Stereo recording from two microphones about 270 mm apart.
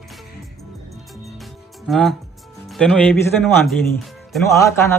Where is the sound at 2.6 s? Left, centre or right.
Centre.